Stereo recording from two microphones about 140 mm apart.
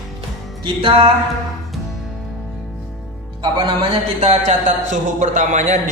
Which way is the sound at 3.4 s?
35° right (ahead or behind).